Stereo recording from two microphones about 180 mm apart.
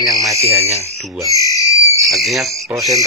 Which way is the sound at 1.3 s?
20° left (ahead or behind).